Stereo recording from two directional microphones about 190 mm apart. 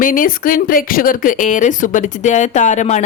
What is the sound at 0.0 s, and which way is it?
Speech, 45° left (ahead or behind).